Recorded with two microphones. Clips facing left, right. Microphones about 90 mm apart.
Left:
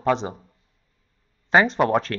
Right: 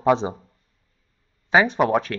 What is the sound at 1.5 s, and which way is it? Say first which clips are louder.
Speech: even; 5° right (ahead or behind).